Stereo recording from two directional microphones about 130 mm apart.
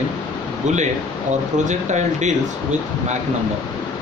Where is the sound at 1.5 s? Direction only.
65° right (ahead or behind).